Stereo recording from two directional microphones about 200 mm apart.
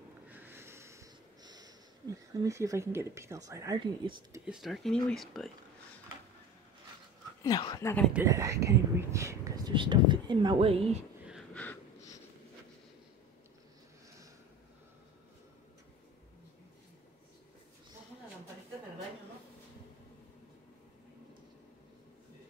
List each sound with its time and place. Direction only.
0.3 s sniff: 10° right (ahead or behind)
4.5 s speech: centre (ahead or behind)
7.4 s speech: 20° left (ahead or behind)
8.1 s speech: 15° right (ahead or behind); by 11.0 s 30° right (ahead or behind)
11.5 s wheeze: 10° left (ahead or behind)